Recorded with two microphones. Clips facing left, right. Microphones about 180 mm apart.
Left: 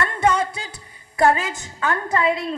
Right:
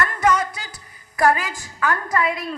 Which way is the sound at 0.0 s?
30° left (ahead or behind).